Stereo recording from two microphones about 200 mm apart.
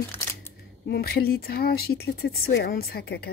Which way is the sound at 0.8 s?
50° left (ahead or behind).